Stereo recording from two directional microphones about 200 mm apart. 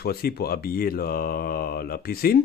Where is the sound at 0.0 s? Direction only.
50° left (ahead or behind).